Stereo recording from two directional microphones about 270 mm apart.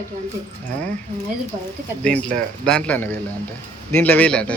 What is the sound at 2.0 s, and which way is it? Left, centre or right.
Speech, centre.